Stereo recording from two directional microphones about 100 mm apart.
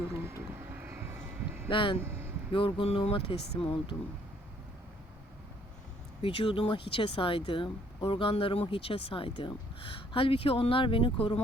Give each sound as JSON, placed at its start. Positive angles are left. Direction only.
{"t": 0.2, "sound": "vehicle", "side_deg": -25}
{"t": 1.6, "sound": "speech", "side_deg": 60}
{"t": 2.0, "sound": "vehicle", "side_deg": -25}
{"t": 2.5, "sound": "speech", "side_deg": 60}
{"t": 6.2, "sound": "speech", "side_deg": 65}